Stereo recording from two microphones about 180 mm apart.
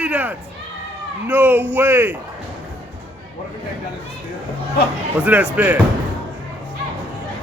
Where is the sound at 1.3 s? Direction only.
10° right (ahead or behind).